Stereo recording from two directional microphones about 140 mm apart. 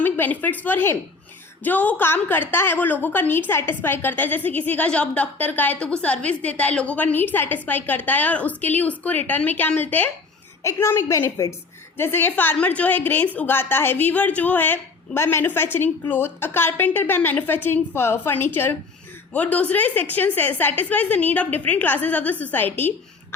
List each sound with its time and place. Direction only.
0.0 s a woman's voice: 15° left (ahead or behind)